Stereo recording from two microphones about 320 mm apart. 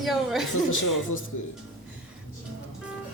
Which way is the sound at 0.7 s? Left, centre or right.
Left.